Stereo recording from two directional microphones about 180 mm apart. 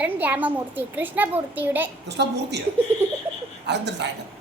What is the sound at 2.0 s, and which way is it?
Speech, 70° right (ahead or behind).